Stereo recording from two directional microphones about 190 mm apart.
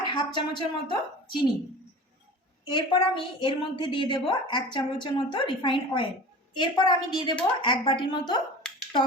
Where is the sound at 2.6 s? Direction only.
25° left (ahead or behind).